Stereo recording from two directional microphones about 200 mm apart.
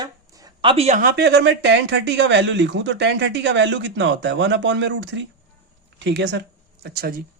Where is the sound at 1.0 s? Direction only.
50° right (ahead or behind).